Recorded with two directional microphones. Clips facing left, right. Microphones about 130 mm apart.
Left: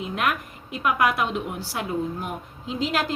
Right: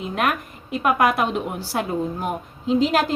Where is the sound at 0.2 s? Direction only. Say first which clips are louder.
Right 4 dB; 30° right (ahead or behind).